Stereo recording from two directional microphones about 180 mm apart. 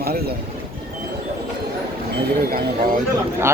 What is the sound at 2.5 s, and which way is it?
Speech, 55° right (ahead or behind).